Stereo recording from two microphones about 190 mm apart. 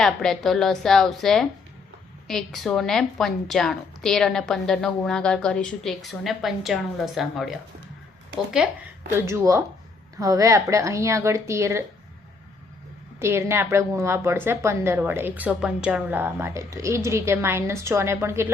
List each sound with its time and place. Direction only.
0.0 s a woman's voice: centre (ahead or behind)
8.5 s a woman's voice: 10° right (ahead or behind)
13.1 s a woman's voice: 15° right (ahead or behind)